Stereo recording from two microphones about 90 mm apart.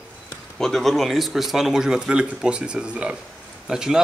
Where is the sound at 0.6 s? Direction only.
5° left (ahead or behind).